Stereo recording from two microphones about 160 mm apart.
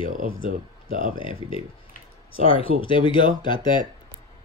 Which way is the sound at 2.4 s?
35° left (ahead or behind).